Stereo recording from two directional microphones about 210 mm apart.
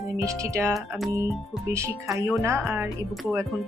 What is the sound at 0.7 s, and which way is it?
Speech, centre (ahead or behind).